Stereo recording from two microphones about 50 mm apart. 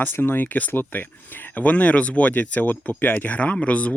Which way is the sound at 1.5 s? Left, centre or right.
Left.